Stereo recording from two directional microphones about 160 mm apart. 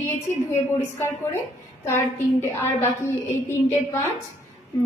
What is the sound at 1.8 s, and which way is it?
A woman's voice, 15° left (ahead or behind).